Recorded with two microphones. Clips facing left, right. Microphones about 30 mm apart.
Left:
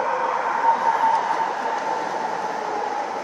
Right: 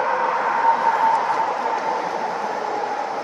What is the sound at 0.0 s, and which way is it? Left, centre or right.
Vehicle, right.